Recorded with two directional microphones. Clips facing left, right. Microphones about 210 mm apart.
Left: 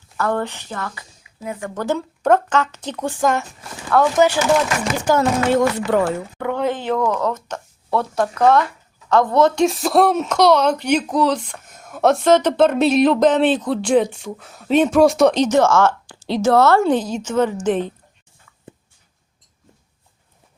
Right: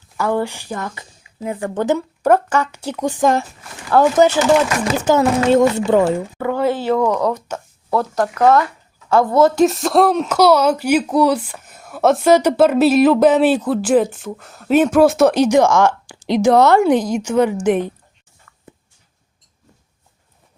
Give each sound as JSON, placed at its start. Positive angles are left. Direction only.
{"t": 0.2, "sound": "a woman's voice", "side_deg": -10}
{"t": 2.0, "sound": "speech", "side_deg": -10}
{"t": 3.9, "sound": "a woman's voice", "side_deg": -30}
{"t": 6.4, "sound": "speech", "side_deg": -5}